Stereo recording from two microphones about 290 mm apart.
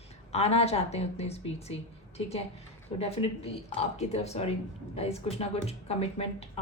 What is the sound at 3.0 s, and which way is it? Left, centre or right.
A woman's voice, centre.